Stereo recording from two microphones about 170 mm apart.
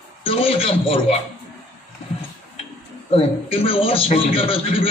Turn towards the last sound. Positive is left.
turn(degrees=35)  # may be behind; listen again after turning